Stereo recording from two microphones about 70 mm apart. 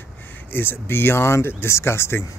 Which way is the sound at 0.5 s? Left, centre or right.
Left.